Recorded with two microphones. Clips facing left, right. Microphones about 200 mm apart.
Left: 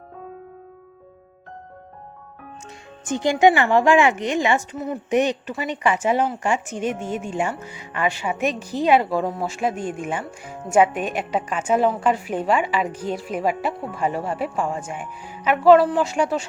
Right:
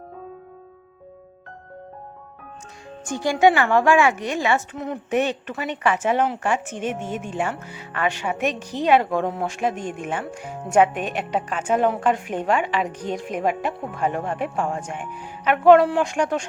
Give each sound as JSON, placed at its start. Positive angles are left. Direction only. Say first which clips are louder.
{"t": 3.1, "sound": "speech", "louder": "left 1 dB", "side_deg": 20}